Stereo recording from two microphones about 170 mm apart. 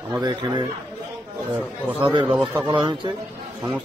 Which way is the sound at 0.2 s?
25° right (ahead or behind).